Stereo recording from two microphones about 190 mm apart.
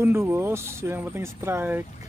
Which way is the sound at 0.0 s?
15° right (ahead or behind).